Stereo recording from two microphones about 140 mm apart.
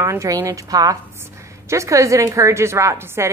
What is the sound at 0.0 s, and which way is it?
A woman's voice, 20° right (ahead or behind).